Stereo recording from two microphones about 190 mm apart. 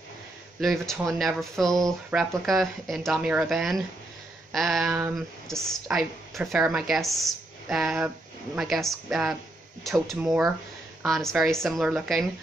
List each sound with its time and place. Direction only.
0.6 s speech: centre (ahead or behind)